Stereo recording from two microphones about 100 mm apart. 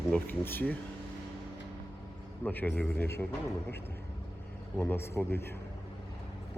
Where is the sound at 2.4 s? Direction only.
20° left (ahead or behind).